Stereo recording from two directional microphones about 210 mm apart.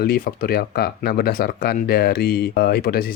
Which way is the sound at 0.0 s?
45° left (ahead or behind).